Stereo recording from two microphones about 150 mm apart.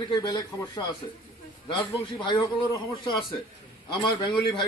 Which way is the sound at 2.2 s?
30° left (ahead or behind).